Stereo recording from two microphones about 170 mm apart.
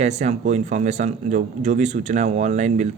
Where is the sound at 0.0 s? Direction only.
40° right (ahead or behind).